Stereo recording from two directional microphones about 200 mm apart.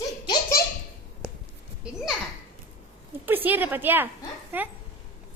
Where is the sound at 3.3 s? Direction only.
10° right (ahead or behind).